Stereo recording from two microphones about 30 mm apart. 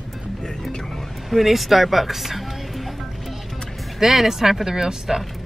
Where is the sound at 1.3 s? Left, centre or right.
Centre.